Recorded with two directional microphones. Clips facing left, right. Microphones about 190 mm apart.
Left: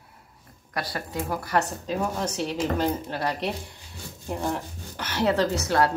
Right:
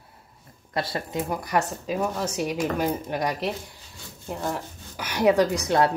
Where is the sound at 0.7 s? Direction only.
25° right (ahead or behind).